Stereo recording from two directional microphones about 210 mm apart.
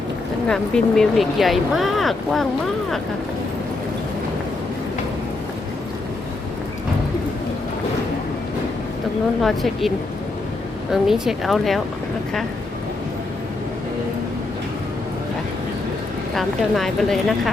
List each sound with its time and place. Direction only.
0.4 s speech: 5° left (ahead or behind)
9.4 s speech: centre (ahead or behind)
10.9 s speech: centre (ahead or behind)
16.3 s speech: centre (ahead or behind)